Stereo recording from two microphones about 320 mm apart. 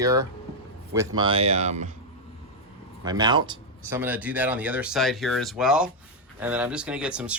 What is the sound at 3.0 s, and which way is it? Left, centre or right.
Speech, centre.